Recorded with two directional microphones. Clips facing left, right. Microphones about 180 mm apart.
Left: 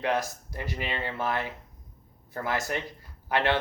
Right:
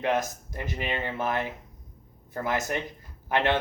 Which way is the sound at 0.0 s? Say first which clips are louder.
Right 1 dB; 20° right (ahead or behind).